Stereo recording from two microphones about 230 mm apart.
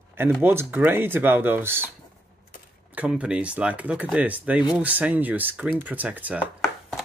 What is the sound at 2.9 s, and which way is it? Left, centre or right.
Speech, centre.